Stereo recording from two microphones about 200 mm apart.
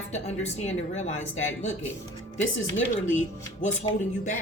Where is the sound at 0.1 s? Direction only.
35° left (ahead or behind).